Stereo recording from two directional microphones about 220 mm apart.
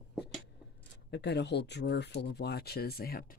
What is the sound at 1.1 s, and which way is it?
Speech, 50° left (ahead or behind).